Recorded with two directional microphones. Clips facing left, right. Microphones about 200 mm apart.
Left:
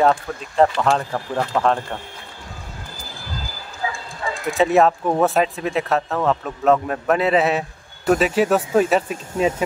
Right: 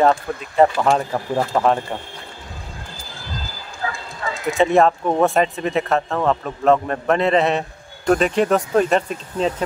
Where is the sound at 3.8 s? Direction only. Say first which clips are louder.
Even; 10° left (ahead or behind).